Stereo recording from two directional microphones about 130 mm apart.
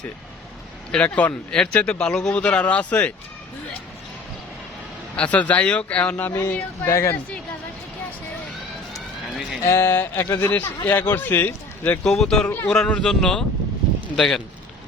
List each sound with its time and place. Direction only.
0.9 s speech: 10° left (ahead or behind)
5.1 s speech: 10° left (ahead or behind)
9.6 s speech: 20° left (ahead or behind)
12.0 s speech: 5° left (ahead or behind)